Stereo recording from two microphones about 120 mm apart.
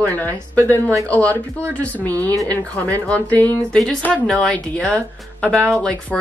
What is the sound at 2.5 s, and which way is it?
Speech, 10° left (ahead or behind).